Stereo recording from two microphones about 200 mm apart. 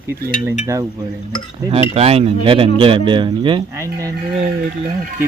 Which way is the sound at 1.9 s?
30° right (ahead or behind).